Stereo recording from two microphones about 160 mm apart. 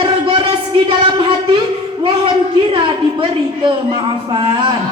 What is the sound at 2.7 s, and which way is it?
Speech, 30° right (ahead or behind).